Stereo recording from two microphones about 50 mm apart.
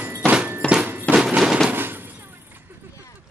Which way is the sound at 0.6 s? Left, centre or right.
Centre.